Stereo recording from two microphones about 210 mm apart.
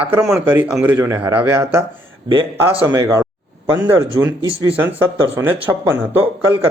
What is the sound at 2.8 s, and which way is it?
Speech, 15° right (ahead or behind).